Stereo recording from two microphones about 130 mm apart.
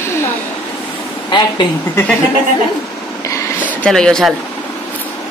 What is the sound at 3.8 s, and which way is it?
Speech, 5° left (ahead or behind).